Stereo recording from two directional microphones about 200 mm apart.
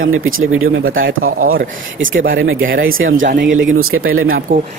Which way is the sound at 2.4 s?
75° right (ahead or behind).